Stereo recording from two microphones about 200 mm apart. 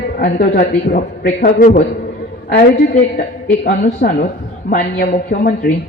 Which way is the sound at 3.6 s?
40° left (ahead or behind).